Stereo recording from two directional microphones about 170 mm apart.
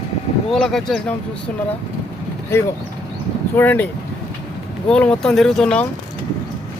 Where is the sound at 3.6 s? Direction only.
10° left (ahead or behind).